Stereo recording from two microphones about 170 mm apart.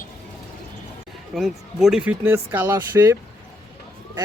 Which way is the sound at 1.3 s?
Centre (ahead or behind).